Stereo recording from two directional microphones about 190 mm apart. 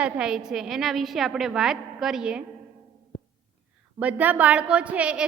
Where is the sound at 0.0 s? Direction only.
5° right (ahead or behind).